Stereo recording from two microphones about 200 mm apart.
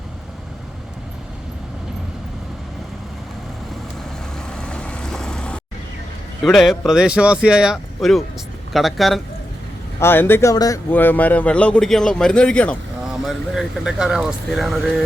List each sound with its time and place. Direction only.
4.4 s vehicle: 5° left (ahead or behind)
6.4 s speech: centre (ahead or behind)
10.0 s speech: 10° left (ahead or behind)